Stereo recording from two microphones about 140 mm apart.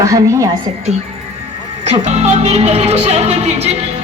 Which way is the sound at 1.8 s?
55° right (ahead or behind).